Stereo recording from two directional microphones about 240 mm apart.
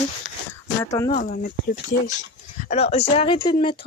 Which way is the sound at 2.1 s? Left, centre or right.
Left.